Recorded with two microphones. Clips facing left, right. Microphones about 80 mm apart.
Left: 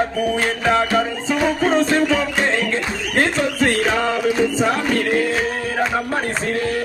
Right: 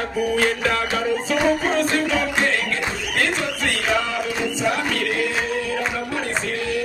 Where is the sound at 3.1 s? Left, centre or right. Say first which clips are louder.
Left 6 dB; left.